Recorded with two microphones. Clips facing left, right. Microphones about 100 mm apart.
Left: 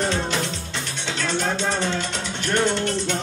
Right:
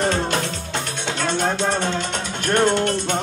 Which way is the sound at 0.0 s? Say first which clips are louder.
Right 3 dB; 50° right (ahead or behind).